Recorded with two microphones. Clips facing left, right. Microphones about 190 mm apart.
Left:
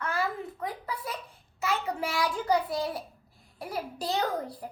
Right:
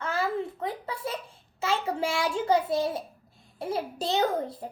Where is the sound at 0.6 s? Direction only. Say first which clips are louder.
Right 3 dB; 25° right (ahead or behind).